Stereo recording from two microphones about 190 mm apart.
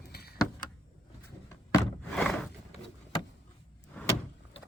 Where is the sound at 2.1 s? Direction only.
5° left (ahead or behind).